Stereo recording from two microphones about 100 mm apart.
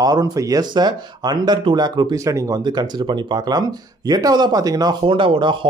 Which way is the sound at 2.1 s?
30° right (ahead or behind).